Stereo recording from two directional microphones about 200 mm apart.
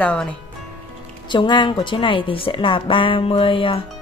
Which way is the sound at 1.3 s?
25° left (ahead or behind).